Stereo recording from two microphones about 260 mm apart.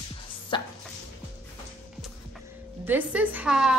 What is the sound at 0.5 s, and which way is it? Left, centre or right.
Dog, centre.